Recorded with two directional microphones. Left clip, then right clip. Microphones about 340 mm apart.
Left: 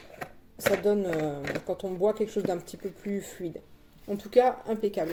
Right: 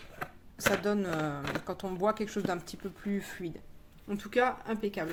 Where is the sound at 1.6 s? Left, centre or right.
Right.